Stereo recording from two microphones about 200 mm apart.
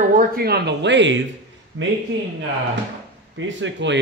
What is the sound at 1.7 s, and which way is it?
Speech, 85° right.